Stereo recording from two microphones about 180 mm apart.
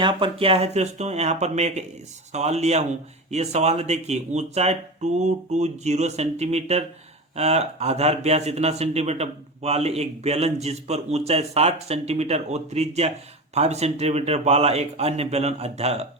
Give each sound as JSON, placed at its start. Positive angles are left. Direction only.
{"t": 0.0, "sound": "speech", "side_deg": -30}